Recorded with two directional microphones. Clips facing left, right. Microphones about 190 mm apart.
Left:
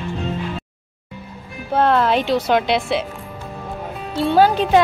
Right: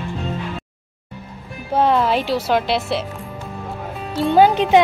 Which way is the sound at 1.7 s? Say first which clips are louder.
Even; 10° right (ahead or behind).